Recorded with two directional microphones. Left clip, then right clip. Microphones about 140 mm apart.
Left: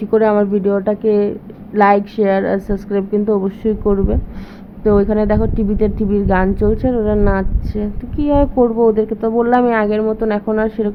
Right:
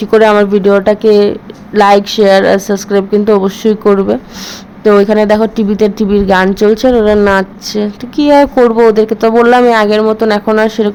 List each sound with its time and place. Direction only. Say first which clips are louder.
0.0 s speech: right 7 dB; 25° right (ahead or behind)
4.8 s a woman's voice: right 7 dB; 20° right (ahead or behind)